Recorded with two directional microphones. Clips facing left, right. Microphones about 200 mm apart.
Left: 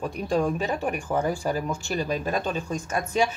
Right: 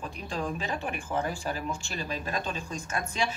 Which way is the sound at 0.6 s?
40° left (ahead or behind).